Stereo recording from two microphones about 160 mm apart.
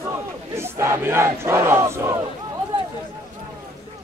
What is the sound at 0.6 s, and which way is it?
Battle cry, 15° right (ahead or behind).